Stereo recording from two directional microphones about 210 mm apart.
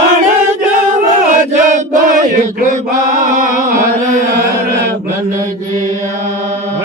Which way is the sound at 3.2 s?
40° right (ahead or behind).